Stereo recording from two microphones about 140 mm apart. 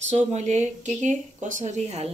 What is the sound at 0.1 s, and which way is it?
Speech, 55° right (ahead or behind).